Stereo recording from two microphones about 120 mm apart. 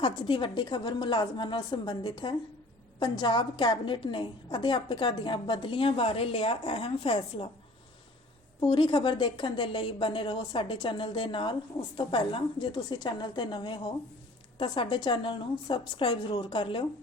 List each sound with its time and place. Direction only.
0.0 s a woman's voice: 45° left (ahead or behind)
8.6 s a woman's voice: 45° left (ahead or behind)